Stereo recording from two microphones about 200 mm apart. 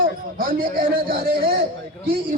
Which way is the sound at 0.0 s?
45° right (ahead or behind).